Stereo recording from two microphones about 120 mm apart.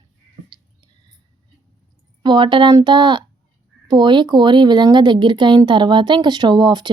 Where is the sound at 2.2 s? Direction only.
40° right (ahead or behind).